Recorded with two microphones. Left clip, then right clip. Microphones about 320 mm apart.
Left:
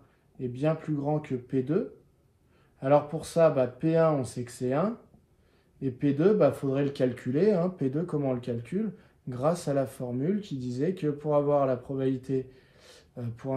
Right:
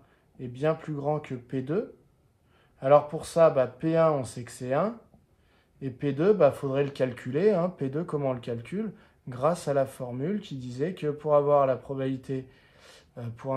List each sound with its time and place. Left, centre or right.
0.4 s speech: right